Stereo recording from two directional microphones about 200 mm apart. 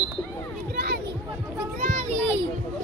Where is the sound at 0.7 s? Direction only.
50° right (ahead or behind).